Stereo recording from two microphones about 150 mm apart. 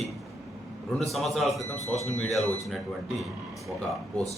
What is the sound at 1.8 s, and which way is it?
Speech, 45° left (ahead or behind).